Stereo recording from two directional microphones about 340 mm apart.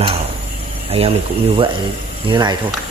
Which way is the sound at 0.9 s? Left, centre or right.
Centre.